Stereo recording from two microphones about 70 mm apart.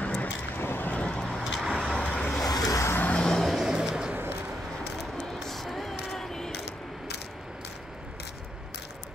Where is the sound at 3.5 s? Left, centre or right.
Centre.